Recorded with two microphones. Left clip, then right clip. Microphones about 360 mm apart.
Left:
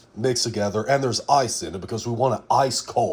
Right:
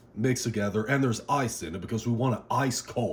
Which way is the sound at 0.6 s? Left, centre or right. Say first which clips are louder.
Left 6 dB; centre.